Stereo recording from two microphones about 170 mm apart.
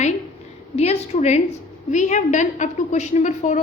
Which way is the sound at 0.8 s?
40° left (ahead or behind).